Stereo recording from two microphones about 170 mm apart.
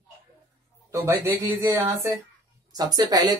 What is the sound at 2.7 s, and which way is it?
Speech, 25° right (ahead or behind).